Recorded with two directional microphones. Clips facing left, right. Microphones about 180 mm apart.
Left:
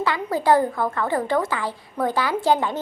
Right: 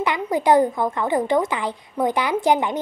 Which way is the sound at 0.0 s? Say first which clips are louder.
Right 2 dB; 20° right (ahead or behind).